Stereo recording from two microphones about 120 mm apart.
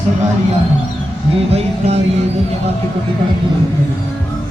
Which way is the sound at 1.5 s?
60° right (ahead or behind).